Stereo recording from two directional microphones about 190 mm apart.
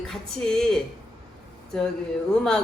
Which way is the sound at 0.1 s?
Centre (ahead or behind).